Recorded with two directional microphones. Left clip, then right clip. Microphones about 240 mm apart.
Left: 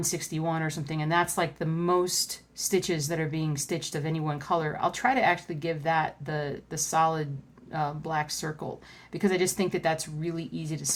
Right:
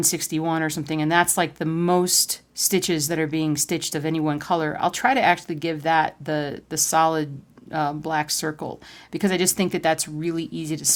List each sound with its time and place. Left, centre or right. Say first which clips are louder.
0.0 s speech: right 7 dB; right